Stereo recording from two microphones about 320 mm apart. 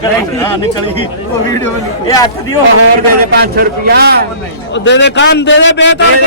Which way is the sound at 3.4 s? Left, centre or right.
Right.